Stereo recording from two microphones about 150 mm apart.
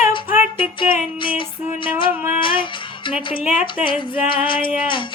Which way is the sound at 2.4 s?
35° left (ahead or behind).